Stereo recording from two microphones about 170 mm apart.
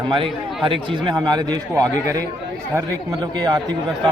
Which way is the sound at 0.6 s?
30° right (ahead or behind).